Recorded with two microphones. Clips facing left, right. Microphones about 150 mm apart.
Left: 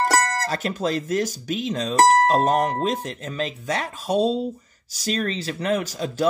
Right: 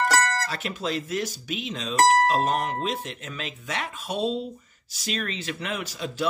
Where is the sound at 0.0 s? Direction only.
35° left (ahead or behind).